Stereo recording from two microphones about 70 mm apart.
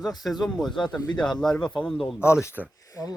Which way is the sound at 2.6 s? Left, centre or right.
Centre.